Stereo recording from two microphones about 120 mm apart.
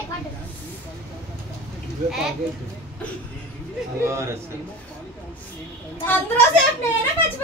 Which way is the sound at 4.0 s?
25° right (ahead or behind).